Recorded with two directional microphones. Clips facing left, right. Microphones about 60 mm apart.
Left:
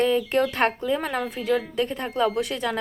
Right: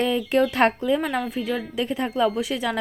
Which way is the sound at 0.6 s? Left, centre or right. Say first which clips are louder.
Right 3 dB; centre.